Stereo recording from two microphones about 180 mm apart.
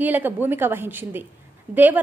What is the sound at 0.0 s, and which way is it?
A woman's voice, 10° right (ahead or behind).